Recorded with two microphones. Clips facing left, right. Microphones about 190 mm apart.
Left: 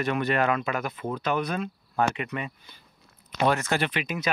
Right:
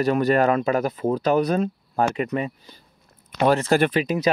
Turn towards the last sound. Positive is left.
turn(degrees=-35)  # may be behind; listen again after turning